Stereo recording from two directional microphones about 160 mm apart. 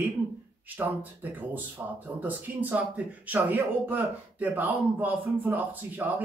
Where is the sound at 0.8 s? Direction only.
10° right (ahead or behind).